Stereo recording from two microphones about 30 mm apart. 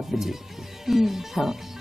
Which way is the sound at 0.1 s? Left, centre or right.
Centre.